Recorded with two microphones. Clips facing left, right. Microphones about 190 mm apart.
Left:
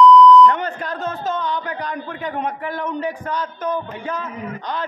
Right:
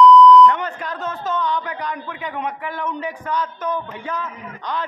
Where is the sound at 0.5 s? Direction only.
35° left (ahead or behind).